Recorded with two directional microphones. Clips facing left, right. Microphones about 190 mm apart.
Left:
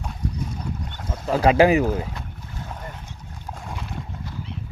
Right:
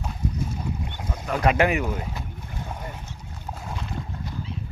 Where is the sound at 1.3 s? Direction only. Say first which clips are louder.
Left 5 dB; 30° left (ahead or behind).